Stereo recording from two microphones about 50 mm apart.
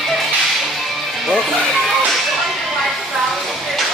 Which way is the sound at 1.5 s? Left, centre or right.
Centre.